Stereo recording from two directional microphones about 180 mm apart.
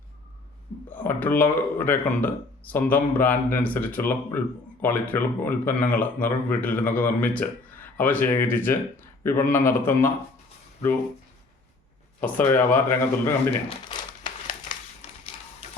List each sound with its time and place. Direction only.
0.9 s speech: 10° left (ahead or behind)
12.2 s speech: 10° left (ahead or behind)
15.0 s printer: 35° left (ahead or behind)